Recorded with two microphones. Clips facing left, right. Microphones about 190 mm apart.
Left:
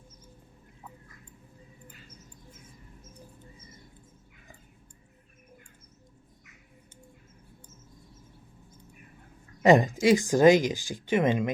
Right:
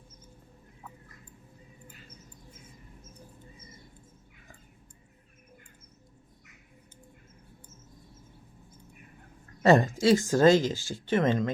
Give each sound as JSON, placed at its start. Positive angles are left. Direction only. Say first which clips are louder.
{"t": 9.6, "sound": "speech", "louder": "left 1 dB", "side_deg": 15}